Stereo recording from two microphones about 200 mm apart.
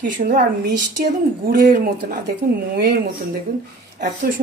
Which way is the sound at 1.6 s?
45° right (ahead or behind).